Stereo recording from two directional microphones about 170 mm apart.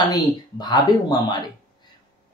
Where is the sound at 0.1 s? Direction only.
25° left (ahead or behind).